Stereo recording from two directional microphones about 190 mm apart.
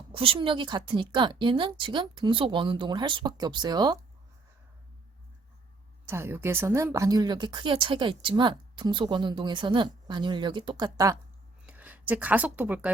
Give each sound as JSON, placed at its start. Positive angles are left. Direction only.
{"t": 0.1, "sound": "speech", "side_deg": -30}
{"t": 6.1, "sound": "speech", "side_deg": -15}